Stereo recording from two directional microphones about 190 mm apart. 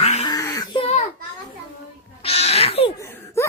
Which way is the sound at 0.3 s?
20° left (ahead or behind).